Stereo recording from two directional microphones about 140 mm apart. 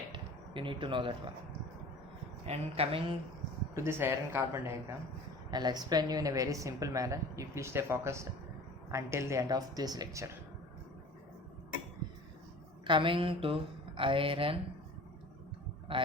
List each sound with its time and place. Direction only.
0.1 s a sound: 35° right (ahead or behind)
2.5 s speech: 45° right (ahead or behind)
3.8 s speech: 15° right (ahead or behind)
5.5 s a woman's voice: 30° right (ahead or behind)
12.8 s speech: 35° right (ahead or behind)